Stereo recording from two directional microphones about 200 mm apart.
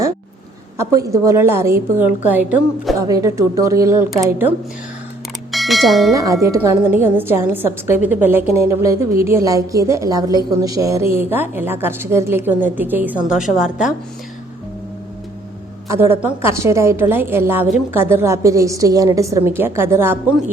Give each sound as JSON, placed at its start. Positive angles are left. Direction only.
{"t": 0.8, "sound": "a woman's voice", "side_deg": -15}
{"t": 5.5, "sound": "bell", "side_deg": 0}
{"t": 6.1, "sound": "a woman's voice", "side_deg": -15}
{"t": 15.9, "sound": "a woman's voice", "side_deg": -10}